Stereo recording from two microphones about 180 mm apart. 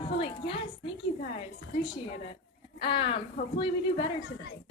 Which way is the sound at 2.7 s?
30° left (ahead or behind).